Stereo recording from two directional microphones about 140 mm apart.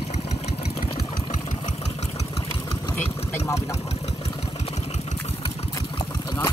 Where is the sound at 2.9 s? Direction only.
15° left (ahead or behind).